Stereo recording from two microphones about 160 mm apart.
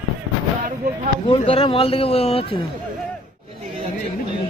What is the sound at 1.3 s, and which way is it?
A man's voice, 35° left (ahead or behind).